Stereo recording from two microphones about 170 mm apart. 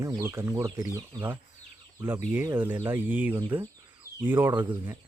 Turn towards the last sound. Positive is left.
turn(degrees=-10)  # may be behind; listen again after turning